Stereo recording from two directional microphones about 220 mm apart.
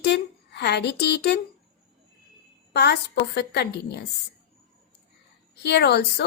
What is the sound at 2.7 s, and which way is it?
A woman's voice, 50° left (ahead or behind).